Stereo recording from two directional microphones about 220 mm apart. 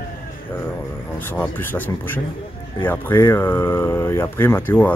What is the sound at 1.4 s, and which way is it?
Speech, 10° left (ahead or behind).